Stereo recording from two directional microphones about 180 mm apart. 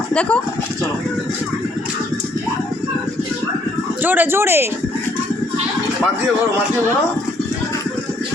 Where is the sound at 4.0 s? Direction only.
10° right (ahead or behind).